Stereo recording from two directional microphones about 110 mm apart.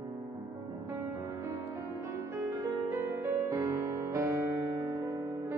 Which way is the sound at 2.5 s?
25° right (ahead or behind).